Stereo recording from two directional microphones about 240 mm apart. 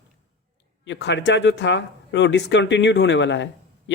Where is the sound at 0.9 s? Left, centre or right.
Left.